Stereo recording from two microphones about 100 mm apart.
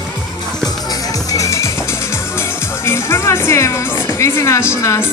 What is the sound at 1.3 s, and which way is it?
A woman's voice, 30° left (ahead or behind).